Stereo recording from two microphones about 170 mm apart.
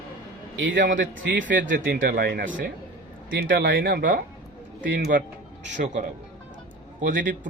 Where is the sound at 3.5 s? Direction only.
75° right (ahead or behind).